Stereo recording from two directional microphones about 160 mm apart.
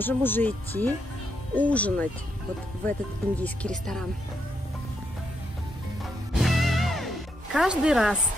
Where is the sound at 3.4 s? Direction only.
5° left (ahead or behind).